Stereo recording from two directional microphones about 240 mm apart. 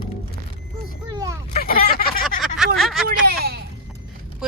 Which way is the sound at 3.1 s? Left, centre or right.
Right.